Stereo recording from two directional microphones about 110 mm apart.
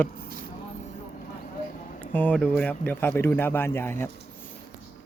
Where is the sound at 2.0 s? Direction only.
15° left (ahead or behind).